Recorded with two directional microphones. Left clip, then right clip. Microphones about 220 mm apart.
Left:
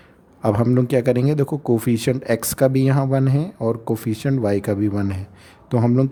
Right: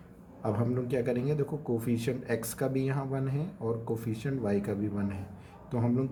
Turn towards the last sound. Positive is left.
turn(degrees=50)  # may be behind; listen again after turning